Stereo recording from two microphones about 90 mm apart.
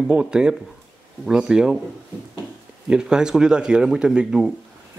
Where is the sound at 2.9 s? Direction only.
10° right (ahead or behind).